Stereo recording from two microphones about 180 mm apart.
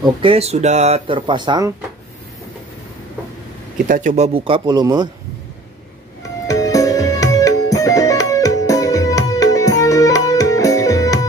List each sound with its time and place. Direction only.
0.0 s speech: 30° right (ahead or behind)
3.8 s speech: 45° right (ahead or behind); by 5.1 s 25° right (ahead or behind)
6.4 s music: 20° left (ahead or behind)